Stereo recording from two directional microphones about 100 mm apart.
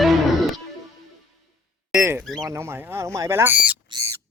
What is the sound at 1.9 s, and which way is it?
Speech, 25° right (ahead or behind).